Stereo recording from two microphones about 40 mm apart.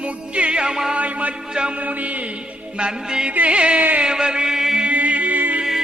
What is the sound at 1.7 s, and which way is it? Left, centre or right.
Mantra, right.